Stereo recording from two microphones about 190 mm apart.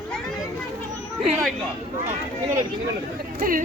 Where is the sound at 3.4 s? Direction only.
45° right (ahead or behind).